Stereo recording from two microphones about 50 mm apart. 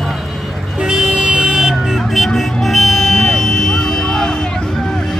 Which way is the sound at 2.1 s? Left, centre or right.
Centre.